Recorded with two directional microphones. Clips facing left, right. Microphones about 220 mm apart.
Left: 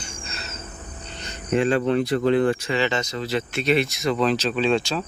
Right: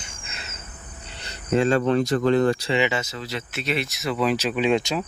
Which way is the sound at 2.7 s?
10° right (ahead or behind).